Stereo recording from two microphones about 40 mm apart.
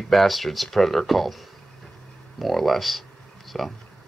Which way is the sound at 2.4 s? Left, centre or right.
Centre.